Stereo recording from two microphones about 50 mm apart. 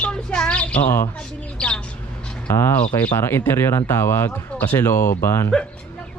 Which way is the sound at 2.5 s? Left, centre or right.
Left.